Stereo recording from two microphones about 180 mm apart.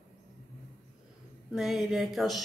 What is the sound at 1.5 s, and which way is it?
Speech, centre (ahead or behind).